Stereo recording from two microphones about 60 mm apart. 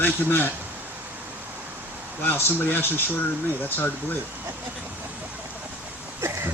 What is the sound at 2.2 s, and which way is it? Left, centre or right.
A man's voice, left.